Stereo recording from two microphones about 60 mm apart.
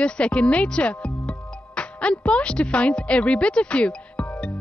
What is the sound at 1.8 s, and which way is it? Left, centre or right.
Speech, centre.